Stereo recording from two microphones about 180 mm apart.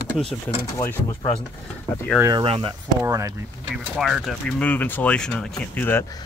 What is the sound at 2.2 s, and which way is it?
Speech, 20° right (ahead or behind).